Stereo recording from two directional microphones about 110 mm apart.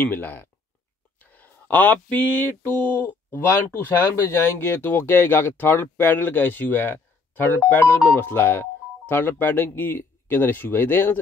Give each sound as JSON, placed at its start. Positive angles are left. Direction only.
{"t": 0.0, "sound": "speech", "side_deg": 20}